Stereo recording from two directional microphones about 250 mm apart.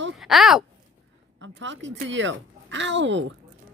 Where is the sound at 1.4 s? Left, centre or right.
Right.